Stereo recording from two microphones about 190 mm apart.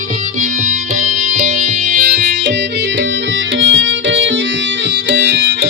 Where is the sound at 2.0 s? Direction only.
50° right (ahead or behind).